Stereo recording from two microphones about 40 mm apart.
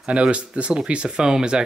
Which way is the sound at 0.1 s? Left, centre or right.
Right.